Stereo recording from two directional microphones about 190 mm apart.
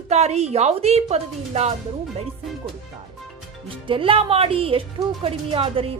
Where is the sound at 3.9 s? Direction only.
30° right (ahead or behind).